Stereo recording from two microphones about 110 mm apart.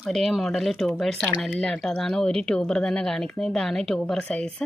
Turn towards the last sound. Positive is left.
turn(degrees=5)  # may be behind; listen again after turning